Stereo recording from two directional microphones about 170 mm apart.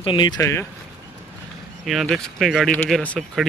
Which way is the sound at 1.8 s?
Centre (ahead or behind).